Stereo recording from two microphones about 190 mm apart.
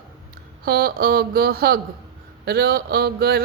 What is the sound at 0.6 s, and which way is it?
Speech, 55° right (ahead or behind).